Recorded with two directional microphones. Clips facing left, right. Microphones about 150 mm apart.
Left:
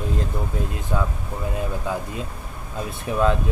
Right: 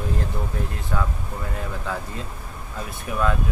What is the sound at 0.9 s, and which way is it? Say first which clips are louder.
Speech: left 2 dB; 20° left (ahead or behind).